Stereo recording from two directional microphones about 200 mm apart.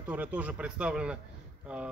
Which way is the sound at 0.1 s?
10° right (ahead or behind).